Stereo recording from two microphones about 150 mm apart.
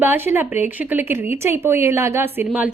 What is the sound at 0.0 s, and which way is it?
A woman's voice, 15° right (ahead or behind).